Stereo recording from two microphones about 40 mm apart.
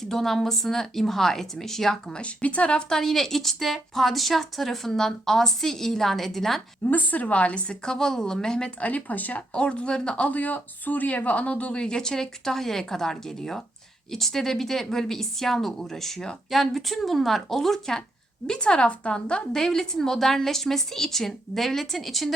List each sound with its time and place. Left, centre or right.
0.0 s a woman's voice: centre
2.1 s speech: left
2.9 s a woman's voice: centre
6.8 s speech: left; by 8.7 s centre
8.8 s speech: left
9.5 s speech: left
10.2 s a woman's voice: left; by 22.4 s centre